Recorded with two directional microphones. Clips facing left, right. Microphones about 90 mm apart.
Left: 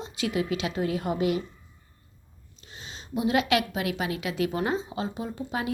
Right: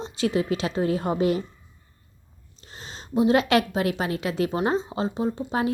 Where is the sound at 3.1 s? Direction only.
35° right (ahead or behind).